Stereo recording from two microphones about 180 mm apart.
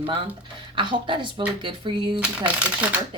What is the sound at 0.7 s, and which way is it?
A woman's voice, 25° right (ahead or behind).